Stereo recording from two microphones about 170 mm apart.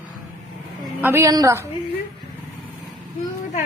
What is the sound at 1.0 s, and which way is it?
Speech, 15° right (ahead or behind).